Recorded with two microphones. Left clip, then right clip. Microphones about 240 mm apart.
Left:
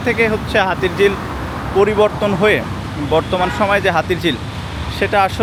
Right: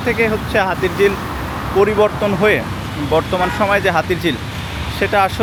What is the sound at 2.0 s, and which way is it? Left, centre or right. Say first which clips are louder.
Speech: even; right.